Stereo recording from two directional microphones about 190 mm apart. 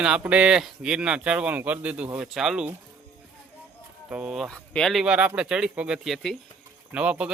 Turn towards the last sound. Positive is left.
turn(degrees=-5)  # may be behind; listen again after turning